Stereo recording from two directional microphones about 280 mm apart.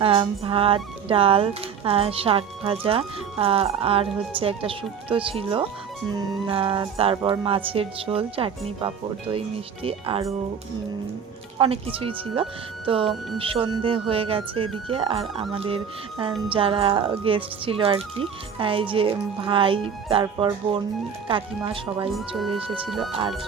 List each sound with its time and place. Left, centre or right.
0.0 s speech: centre
11.5 s speech: centre